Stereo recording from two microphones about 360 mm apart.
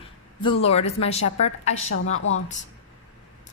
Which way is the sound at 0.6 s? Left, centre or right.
Centre.